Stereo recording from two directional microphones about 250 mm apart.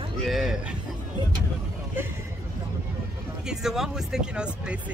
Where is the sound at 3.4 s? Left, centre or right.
Centre.